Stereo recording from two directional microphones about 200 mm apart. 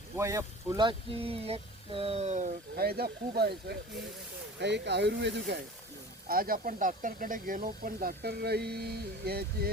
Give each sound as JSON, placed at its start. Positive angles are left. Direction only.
{"t": 0.2, "sound": "speech", "side_deg": -15}
{"t": 2.7, "sound": "speech", "side_deg": -50}
{"t": 6.2, "sound": "speech", "side_deg": -45}